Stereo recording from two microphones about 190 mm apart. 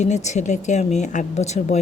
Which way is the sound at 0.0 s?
40° left (ahead or behind).